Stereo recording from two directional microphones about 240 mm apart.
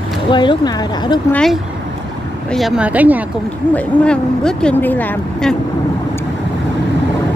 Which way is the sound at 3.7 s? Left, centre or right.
Centre.